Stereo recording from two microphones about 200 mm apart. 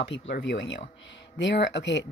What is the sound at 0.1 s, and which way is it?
Speech, 65° left (ahead or behind).